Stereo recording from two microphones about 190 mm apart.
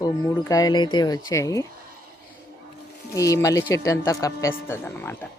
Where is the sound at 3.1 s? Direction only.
15° left (ahead or behind).